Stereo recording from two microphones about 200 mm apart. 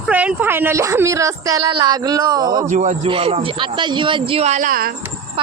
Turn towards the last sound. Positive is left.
turn(degrees=-45)  # may be behind; listen again after turning